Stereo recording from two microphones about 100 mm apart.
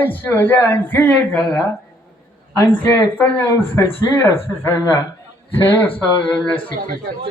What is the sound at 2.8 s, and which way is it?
Speech, 20° left (ahead or behind).